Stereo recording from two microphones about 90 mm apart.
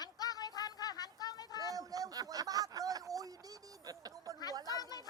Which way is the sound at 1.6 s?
40° right (ahead or behind).